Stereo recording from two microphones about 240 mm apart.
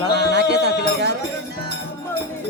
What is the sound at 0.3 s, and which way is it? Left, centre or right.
Music, right.